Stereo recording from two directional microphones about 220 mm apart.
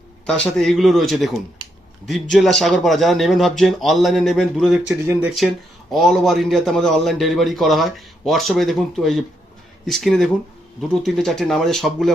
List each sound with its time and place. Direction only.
0.3 s a man's voice: 5° left (ahead or behind)